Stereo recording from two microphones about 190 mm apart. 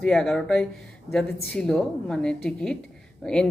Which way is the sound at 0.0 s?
Centre (ahead or behind).